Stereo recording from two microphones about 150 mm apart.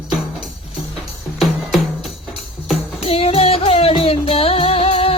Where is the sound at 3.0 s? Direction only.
40° left (ahead or behind).